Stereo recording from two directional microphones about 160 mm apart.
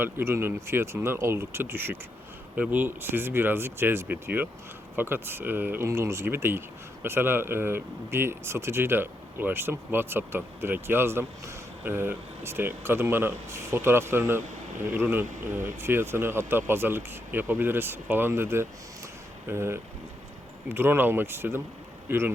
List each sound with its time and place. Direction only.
0.0 s speech: 15° right (ahead or behind)